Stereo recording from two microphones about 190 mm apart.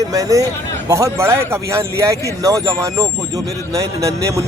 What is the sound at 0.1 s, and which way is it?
Speech, 20° right (ahead or behind).